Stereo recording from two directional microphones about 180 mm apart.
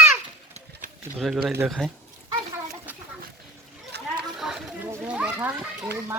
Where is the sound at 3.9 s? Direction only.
70° right (ahead or behind).